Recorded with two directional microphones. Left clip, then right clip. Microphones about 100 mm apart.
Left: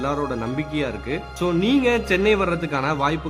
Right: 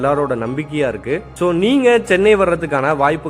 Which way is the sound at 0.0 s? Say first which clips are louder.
Right 8 dB; 30° right (ahead or behind).